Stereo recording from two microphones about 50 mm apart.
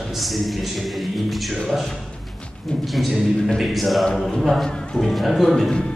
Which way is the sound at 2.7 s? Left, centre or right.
Centre.